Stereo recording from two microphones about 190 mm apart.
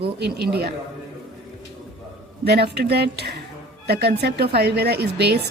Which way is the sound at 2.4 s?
60° right (ahead or behind).